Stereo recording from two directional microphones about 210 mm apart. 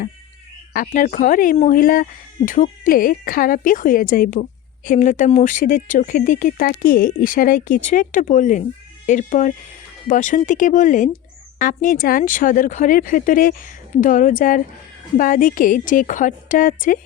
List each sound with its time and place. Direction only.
0.7 s speech: 40° left (ahead or behind)